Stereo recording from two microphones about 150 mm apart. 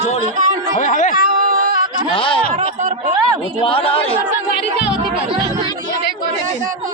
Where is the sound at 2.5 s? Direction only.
55° right (ahead or behind).